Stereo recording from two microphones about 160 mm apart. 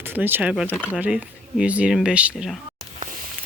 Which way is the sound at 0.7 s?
10° left (ahead or behind).